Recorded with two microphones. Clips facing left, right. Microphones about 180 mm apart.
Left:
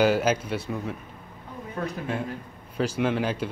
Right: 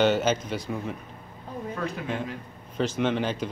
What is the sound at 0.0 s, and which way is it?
Speech, 5° left (ahead or behind).